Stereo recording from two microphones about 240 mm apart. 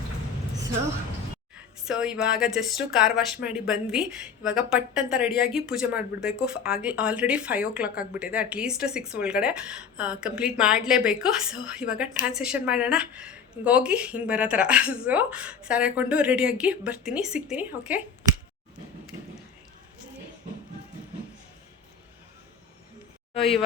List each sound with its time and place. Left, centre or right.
1.9 s speech: centre
23.4 s speech: centre